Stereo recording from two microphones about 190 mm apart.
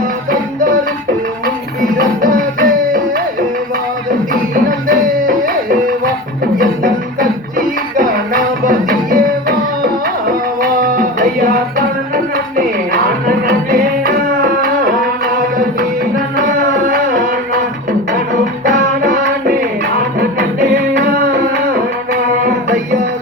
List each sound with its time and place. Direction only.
2.0 s music: 45° right (ahead or behind)
4.5 s music: 45° right (ahead or behind)
6.6 s music: 50° right (ahead or behind)
16.9 s music: 50° right (ahead or behind)
19.0 s music: 60° right (ahead or behind)
20.1 s music: 50° right (ahead or behind)